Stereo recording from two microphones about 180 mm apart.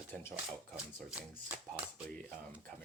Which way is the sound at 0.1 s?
15° left (ahead or behind).